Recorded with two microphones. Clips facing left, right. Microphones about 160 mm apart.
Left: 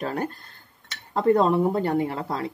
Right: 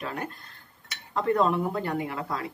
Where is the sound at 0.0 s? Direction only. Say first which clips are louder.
Left 6 dB; 35° left (ahead or behind).